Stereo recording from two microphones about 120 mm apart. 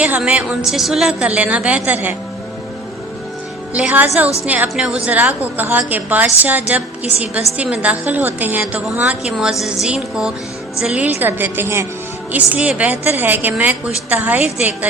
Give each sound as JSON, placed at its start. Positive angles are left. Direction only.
{"t": 0.0, "sound": "a woman's voice", "side_deg": -10}
{"t": 3.8, "sound": "a woman's voice", "side_deg": -10}